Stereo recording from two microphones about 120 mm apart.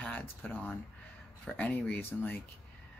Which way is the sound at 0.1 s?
15° left (ahead or behind).